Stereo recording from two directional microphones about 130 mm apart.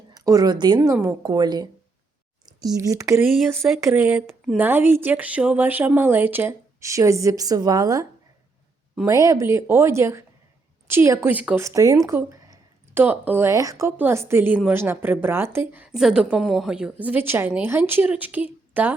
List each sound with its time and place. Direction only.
0.1 s speech: 30° right (ahead or behind)
0.8 s speech: 20° right (ahead or behind)
1.2 s a woman's voice: 30° right (ahead or behind)
9.0 s speech: 25° right (ahead or behind)
11.3 s a woman's voice: 10° right (ahead or behind)
11.6 s a woman's voice: 25° right (ahead or behind)